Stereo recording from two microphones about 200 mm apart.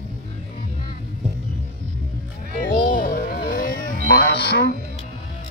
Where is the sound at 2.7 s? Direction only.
45° left (ahead or behind).